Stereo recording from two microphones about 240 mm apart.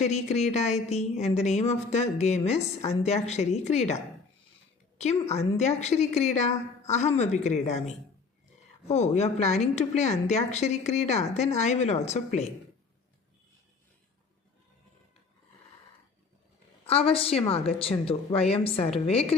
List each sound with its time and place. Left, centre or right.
0.0 s a woman's voice: left
16.8 s a woman's voice: left